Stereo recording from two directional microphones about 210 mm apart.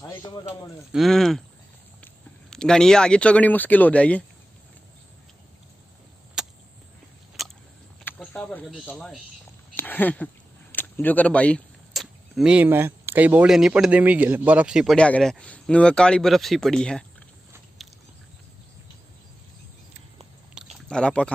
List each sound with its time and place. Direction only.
0.0 s speech: 15° left (ahead or behind)
0.9 s speech: centre (ahead or behind)
2.5 s speech: 5° left (ahead or behind)
6.4 s a sound: 5° right (ahead or behind)
9.8 s speech: 10° left (ahead or behind)
20.6 s a sound: 5° right (ahead or behind)
20.9 s speech: 5° left (ahead or behind)